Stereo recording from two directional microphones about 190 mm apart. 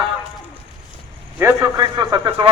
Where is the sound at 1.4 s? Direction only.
15° right (ahead or behind).